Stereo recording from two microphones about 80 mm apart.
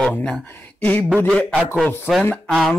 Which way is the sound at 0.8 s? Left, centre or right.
Left.